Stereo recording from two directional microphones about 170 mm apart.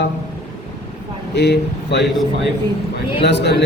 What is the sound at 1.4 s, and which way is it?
A man's voice, 80° left.